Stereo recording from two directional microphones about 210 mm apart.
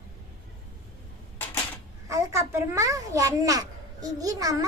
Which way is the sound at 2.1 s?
15° right (ahead or behind).